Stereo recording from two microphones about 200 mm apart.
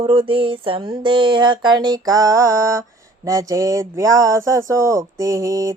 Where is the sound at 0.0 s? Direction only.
25° right (ahead or behind).